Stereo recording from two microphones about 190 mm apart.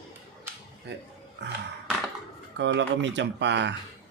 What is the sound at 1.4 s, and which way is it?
Speech, 65° right (ahead or behind).